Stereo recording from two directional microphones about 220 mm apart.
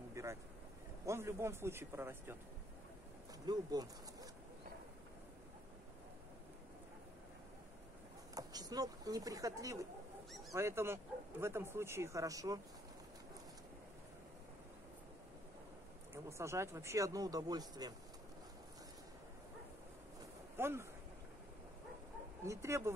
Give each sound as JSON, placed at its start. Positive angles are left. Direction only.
{"t": 0.1, "sound": "vehicle", "side_deg": -15}
{"t": 1.0, "sound": "speech", "side_deg": -10}
{"t": 3.4, "sound": "speech", "side_deg": -15}
{"t": 8.4, "sound": "speech", "side_deg": -15}
{"t": 16.3, "sound": "speech", "side_deg": -10}
{"t": 20.5, "sound": "speech", "side_deg": -10}
{"t": 22.4, "sound": "speech", "side_deg": -15}